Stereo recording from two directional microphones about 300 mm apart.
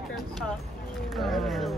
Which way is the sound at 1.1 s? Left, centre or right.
Centre.